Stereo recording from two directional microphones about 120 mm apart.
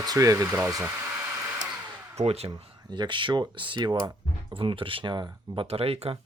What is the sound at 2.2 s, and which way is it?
Speech, 60° right (ahead or behind).